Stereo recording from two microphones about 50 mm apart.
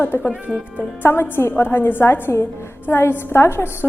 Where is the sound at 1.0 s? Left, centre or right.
Left.